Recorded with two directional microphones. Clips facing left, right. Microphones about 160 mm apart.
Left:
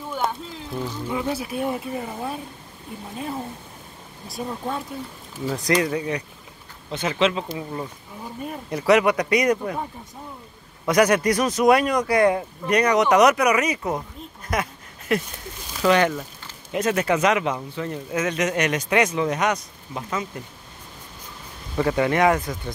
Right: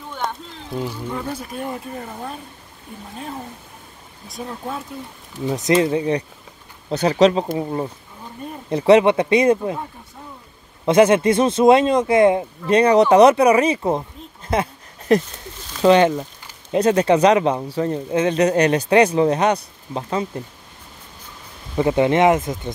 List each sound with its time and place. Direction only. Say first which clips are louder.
0.1 s a sound: left 1 dB; 5° left (ahead or behind)
0.7 s speech: right 3 dB; 10° right (ahead or behind)
1.0 s speech: left 1 dB; 10° left (ahead or behind)
4.3 s speech: left 1 dB; centre (ahead or behind)
5.4 s speech: right 5 dB; 20° right (ahead or behind)
10.9 s speech: right 5 dB; 25° right (ahead or behind)
14.5 s a sound: right 5 dB; 30° right (ahead or behind)
15.8 s speech: right 5 dB; 25° right (ahead or behind)
16.7 s speech: right 6 dB; 30° right (ahead or behind)
21.7 s speech: right 4 dB; 20° right (ahead or behind)